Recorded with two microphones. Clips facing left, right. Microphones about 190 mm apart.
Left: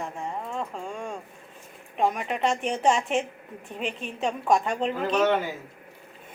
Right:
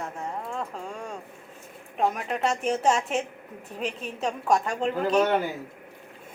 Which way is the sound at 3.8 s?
40° right (ahead or behind).